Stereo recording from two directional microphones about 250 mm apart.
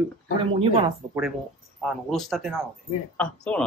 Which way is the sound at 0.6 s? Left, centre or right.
Right.